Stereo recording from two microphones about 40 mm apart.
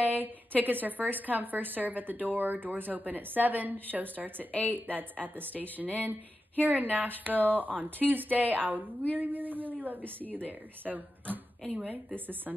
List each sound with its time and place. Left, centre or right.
0.0 s a sound: right
0.6 s a woman's voice: right
4.5 s a woman's voice: left
4.7 s a woman's voice: right